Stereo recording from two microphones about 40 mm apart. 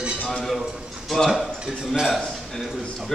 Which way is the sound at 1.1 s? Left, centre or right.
Centre.